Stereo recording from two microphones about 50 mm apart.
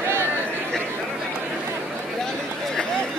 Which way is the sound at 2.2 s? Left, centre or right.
Centre.